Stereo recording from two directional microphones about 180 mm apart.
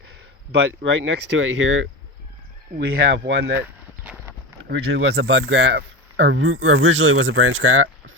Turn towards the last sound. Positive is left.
turn(degrees=-90)